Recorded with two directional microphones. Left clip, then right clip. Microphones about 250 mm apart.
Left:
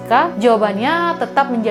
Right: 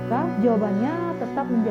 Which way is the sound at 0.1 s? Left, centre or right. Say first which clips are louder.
Left 10 dB; centre.